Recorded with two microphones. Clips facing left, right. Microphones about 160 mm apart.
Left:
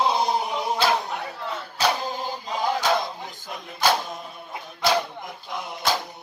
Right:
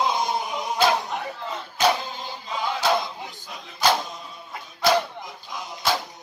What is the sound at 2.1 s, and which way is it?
Chant, 45° left (ahead or behind).